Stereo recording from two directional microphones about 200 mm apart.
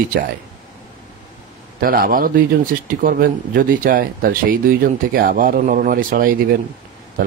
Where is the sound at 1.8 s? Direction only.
45° right (ahead or behind).